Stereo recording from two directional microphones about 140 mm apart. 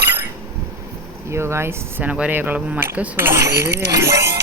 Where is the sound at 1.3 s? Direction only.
20° right (ahead or behind).